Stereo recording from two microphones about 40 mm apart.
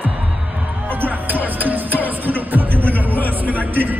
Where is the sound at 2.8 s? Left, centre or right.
Left.